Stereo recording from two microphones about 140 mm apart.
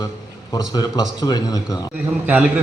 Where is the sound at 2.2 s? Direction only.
10° right (ahead or behind).